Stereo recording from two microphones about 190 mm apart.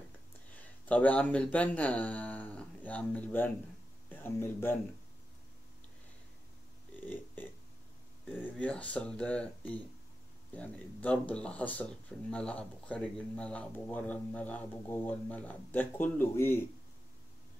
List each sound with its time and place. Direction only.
0.5 s speech: 10° left (ahead or behind)
8.5 s speech: 5° left (ahead or behind)